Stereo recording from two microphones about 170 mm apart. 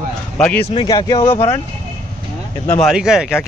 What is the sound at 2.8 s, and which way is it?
Speech, 5° right (ahead or behind).